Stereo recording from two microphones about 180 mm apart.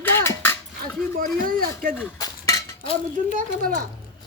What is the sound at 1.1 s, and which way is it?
Speech, 50° right (ahead or behind).